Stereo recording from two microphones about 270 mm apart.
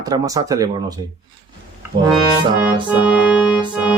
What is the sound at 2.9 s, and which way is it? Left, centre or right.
Organ, centre.